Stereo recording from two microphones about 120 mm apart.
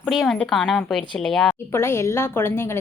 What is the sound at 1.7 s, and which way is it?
A woman's voice, 20° left (ahead or behind).